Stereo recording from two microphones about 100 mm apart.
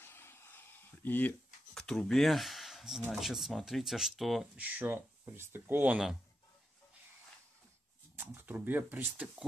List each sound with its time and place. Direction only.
0.0 s a sound: 25° left (ahead or behind)
1.7 s speech: 5° left (ahead or behind)
4.6 s speech: 15° right (ahead or behind)
8.2 s speech: 20° right (ahead or behind)